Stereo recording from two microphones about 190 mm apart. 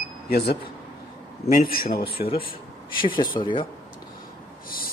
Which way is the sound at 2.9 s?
25° left (ahead or behind).